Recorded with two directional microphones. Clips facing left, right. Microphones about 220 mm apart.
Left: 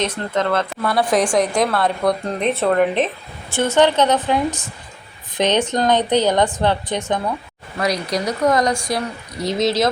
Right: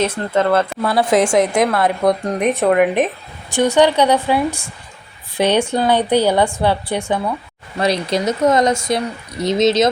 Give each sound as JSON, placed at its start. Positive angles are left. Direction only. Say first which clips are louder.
{"t": 0.0, "sound": "a woman's voice", "louder": "right 4 dB", "side_deg": -5}
{"t": 0.8, "sound": "a woman's voice", "louder": "even", "side_deg": -25}
{"t": 7.8, "sound": "speech", "louder": "right 3 dB", "side_deg": -25}